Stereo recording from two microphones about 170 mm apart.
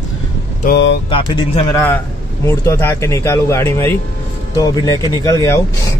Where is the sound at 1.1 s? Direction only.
25° left (ahead or behind).